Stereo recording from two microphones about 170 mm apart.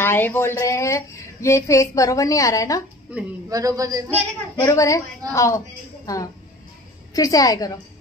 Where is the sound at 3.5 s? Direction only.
20° right (ahead or behind).